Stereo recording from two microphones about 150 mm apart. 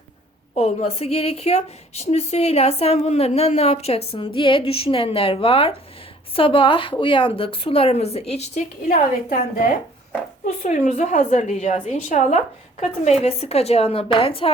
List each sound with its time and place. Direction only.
0.5 s a woman's voice: 45° left (ahead or behind)
8.9 s a woman's voice: 60° left (ahead or behind); by 14.5 s 40° left (ahead or behind)